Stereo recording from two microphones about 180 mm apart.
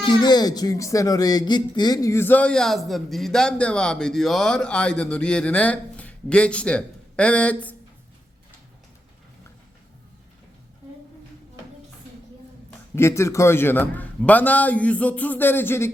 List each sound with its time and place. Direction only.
0.0 s speech: 25° left (ahead or behind)
13.0 s speech: 15° left (ahead or behind)